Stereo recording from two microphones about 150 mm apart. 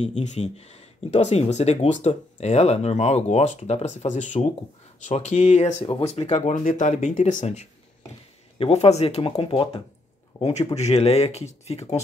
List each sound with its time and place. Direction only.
0.0 s speech: 50° left (ahead or behind); by 9.7 s 35° left (ahead or behind)
10.3 s a sound: 10° left (ahead or behind)
10.7 s speech: 45° left (ahead or behind)